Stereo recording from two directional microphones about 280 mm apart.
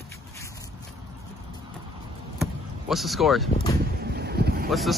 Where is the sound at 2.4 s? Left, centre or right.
Centre.